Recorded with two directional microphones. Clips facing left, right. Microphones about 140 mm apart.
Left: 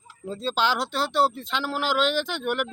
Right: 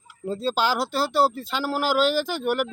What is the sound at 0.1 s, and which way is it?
Speech, 10° right (ahead or behind).